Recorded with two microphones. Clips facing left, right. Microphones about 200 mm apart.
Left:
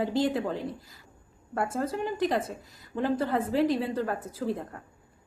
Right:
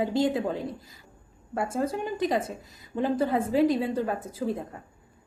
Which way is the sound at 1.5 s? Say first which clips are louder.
Right 2 dB; 10° right (ahead or behind).